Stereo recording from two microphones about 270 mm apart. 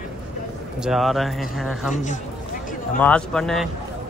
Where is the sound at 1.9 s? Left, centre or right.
Left.